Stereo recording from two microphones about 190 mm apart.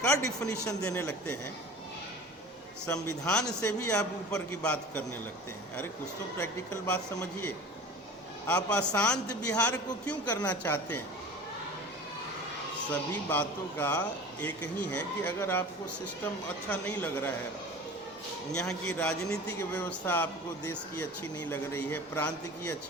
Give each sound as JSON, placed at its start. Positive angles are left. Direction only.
{"t": 0.1, "sound": "a man's voice", "side_deg": 20}
{"t": 0.8, "sound": "a man's voice", "side_deg": 5}
{"t": 2.9, "sound": "a man's voice", "side_deg": 10}
{"t": 3.6, "sound": "a man's voice", "side_deg": 15}
{"t": 4.4, "sound": "a man's voice", "side_deg": 5}
{"t": 6.4, "sound": "a man's voice", "side_deg": 5}
{"t": 13.3, "sound": "a man's voice", "side_deg": 10}
{"t": 16.6, "sound": "a man's voice", "side_deg": 10}
{"t": 18.5, "sound": "a man's voice", "side_deg": 5}